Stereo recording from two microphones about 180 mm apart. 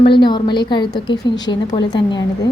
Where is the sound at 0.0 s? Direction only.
25° left (ahead or behind).